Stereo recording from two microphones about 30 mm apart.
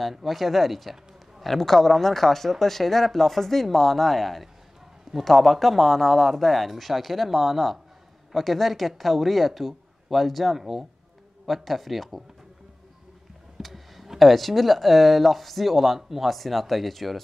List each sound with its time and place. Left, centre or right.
0.1 s speech: centre
10.6 s speech: centre
11.4 s speech: centre
13.6 s a sound: centre
14.0 s speech: centre